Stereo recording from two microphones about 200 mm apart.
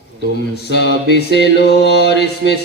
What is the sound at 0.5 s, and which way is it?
Mantra, 60° left (ahead or behind).